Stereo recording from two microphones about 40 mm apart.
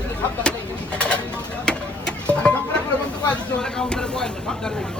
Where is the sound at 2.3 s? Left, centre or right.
Left.